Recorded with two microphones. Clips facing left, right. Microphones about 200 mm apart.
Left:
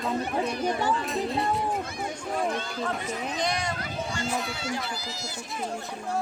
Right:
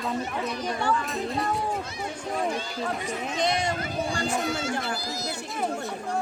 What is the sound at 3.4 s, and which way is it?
Speech, 25° right (ahead or behind).